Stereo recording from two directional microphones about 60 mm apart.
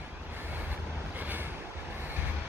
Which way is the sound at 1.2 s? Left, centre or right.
Right.